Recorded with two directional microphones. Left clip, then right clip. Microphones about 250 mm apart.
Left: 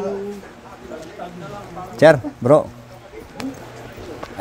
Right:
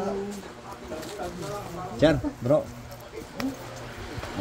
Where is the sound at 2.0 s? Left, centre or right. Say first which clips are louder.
Left 11 dB; left.